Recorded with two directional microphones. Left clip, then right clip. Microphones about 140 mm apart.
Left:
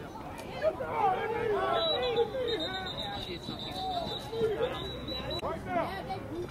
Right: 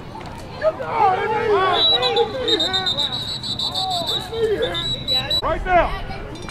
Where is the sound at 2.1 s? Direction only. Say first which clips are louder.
Right 11 dB; 85° right.